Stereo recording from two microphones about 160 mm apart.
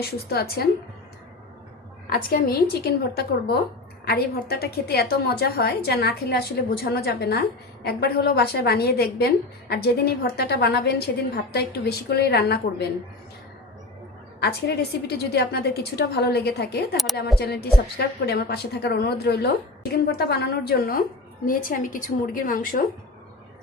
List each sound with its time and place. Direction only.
0.0 s a woman's voice: 80° left
2.0 s a woman's voice: 70° left (ahead or behind); by 12.5 s 90° left
14.4 s a woman's voice: 85° left; by 21.0 s 70° left (ahead or behind)
21.4 s a woman's voice: 60° left (ahead or behind)